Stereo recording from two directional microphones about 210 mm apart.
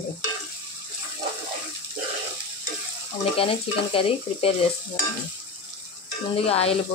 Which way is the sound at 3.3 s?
25° left (ahead or behind).